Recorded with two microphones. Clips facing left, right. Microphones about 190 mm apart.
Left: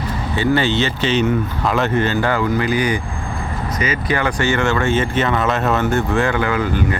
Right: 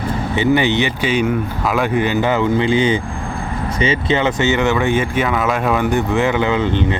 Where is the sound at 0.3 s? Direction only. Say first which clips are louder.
Right 2 dB; 20° right (ahead or behind).